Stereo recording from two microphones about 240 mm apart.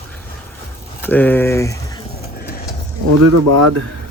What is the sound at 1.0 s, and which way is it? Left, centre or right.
Speech, centre.